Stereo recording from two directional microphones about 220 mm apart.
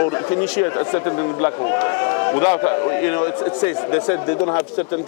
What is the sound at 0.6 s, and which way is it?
A man's voice, 20° left (ahead or behind).